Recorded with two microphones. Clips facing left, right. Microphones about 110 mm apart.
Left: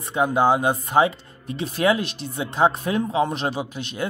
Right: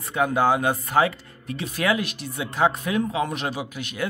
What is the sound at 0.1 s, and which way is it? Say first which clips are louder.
A man's voice: left 2 dB; 20° left (ahead or behind).